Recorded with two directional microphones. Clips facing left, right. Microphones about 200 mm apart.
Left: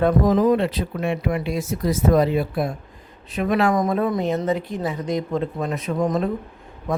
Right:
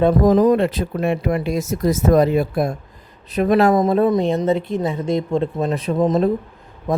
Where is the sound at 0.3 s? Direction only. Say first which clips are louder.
Right 4 dB; 40° right (ahead or behind).